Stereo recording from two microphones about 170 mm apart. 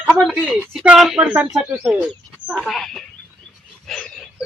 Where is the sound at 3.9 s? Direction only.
Centre (ahead or behind).